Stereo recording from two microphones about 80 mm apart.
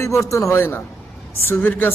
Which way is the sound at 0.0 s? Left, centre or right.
Left.